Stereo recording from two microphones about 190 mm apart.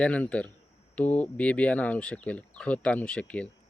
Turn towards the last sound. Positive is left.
turn(degrees=5)  # may be behind; listen again after turning